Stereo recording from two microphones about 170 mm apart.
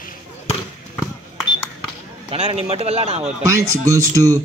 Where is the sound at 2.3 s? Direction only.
40° right (ahead or behind).